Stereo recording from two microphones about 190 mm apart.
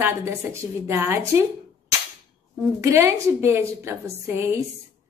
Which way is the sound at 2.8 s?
15° right (ahead or behind).